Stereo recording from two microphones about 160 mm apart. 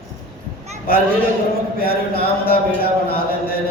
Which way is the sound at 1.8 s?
70° left (ahead or behind).